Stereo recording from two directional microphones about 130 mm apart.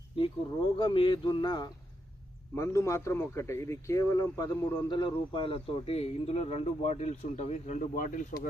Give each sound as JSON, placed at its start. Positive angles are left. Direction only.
{"t": 0.2, "sound": "speech", "side_deg": 40}
{"t": 7.9, "sound": "speech", "side_deg": 85}